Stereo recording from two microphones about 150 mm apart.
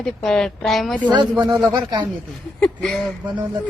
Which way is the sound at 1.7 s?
30° right (ahead or behind).